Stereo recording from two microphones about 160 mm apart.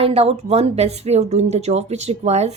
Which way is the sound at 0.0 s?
40° right (ahead or behind).